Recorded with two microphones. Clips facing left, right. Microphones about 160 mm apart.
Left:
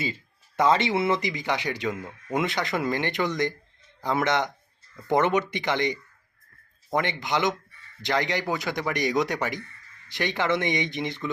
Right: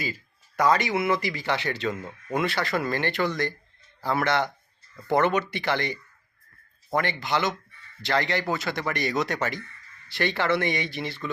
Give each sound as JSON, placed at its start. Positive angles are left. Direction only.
{"t": 0.0, "sound": "speech", "side_deg": 25}